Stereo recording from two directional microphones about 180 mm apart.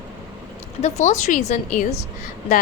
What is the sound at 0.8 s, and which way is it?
A woman's voice, 40° left (ahead or behind).